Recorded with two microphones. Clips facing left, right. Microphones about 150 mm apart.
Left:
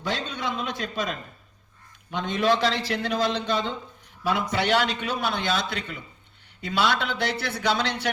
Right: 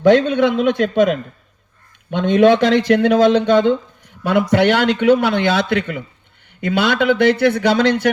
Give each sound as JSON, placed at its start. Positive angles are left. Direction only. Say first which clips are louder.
{"t": 0.0, "sound": "a man's voice", "louder": "right 18 dB", "side_deg": -60}